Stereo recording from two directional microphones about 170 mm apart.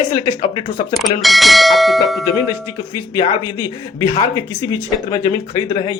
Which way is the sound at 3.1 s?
25° left (ahead or behind).